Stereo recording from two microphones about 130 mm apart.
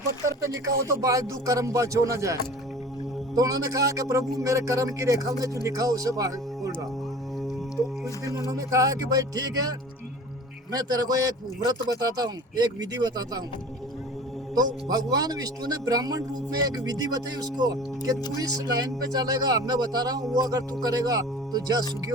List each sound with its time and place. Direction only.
0.5 s a man's voice: 25° right (ahead or behind)
8.4 s a man's voice: 25° right (ahead or behind)
14.5 s a man's voice: 30° right (ahead or behind)